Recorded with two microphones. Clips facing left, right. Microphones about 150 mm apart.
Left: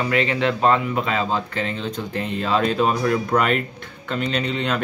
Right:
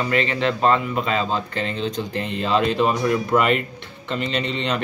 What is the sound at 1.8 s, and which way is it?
Speech, 50° left (ahead or behind).